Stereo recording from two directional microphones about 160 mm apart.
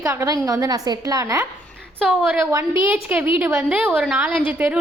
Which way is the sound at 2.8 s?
10° right (ahead or behind).